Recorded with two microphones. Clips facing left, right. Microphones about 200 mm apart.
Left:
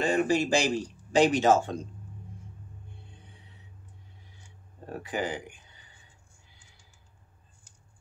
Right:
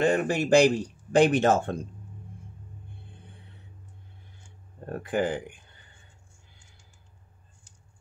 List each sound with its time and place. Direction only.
0.0 s speech: 60° right (ahead or behind)
3.1 s music: 55° right (ahead or behind)
4.9 s speech: 55° right (ahead or behind)